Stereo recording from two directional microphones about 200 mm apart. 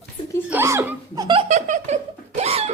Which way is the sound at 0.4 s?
10° right (ahead or behind).